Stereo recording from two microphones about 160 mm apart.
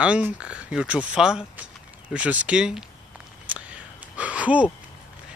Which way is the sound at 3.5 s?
10° right (ahead or behind).